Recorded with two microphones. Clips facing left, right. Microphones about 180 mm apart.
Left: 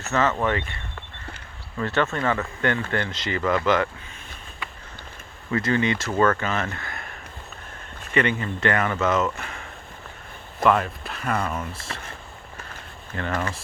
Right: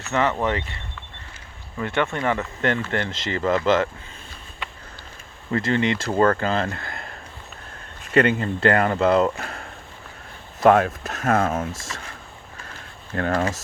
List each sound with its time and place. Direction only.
0.1 s speech: 15° right (ahead or behind)
1.8 s speech: 15° right (ahead or behind)
5.5 s speech: 30° right (ahead or behind)
8.1 s speech: 35° right (ahead or behind)
13.1 s speech: 50° right (ahead or behind)